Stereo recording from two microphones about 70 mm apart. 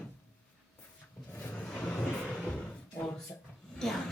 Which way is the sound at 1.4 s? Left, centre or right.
Left.